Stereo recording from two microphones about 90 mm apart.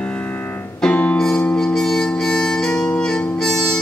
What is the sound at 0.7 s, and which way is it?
Music, 10° left (ahead or behind).